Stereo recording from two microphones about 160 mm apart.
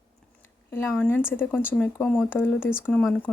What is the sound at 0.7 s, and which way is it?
Speech, 15° left (ahead or behind).